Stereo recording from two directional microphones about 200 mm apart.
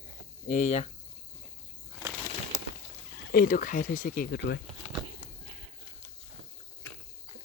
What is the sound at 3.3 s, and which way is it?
Speech, 45° left (ahead or behind).